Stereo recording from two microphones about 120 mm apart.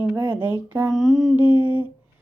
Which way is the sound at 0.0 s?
15° right (ahead or behind).